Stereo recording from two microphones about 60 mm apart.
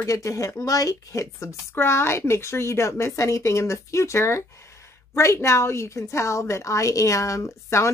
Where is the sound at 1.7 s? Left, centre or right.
Left.